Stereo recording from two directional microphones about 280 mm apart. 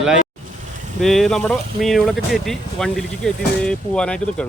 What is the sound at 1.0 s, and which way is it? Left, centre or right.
Speech, centre.